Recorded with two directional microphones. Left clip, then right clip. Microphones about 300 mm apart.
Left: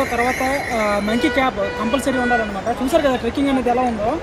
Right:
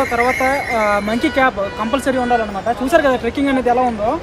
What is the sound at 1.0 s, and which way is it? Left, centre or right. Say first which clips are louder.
Speech: right 2 dB; centre.